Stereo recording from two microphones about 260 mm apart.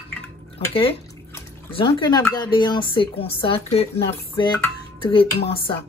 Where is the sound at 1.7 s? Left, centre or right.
Centre.